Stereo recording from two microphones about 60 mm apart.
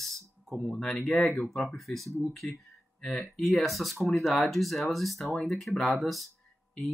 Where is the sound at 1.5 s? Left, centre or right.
Centre.